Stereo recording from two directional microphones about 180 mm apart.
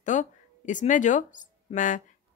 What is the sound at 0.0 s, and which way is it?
Speech, 45° left (ahead or behind).